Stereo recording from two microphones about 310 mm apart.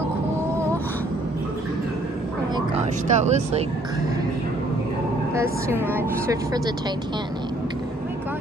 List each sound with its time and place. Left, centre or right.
2.5 s speech: right
5.3 s speech: centre